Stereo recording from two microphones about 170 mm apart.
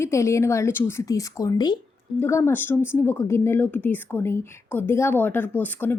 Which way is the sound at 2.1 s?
15° left (ahead or behind).